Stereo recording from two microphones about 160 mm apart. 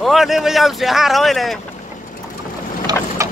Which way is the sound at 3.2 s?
20° right (ahead or behind).